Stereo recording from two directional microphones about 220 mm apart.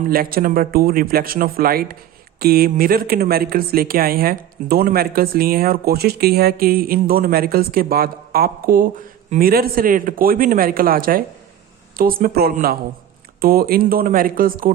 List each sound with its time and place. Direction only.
0.0 s speech: 40° right (ahead or behind)